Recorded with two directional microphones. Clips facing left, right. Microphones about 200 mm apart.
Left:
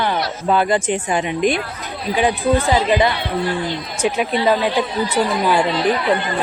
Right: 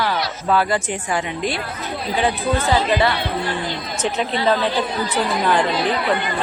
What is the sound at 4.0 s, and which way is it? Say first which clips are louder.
Speech: left 3 dB; 10° left (ahead or behind).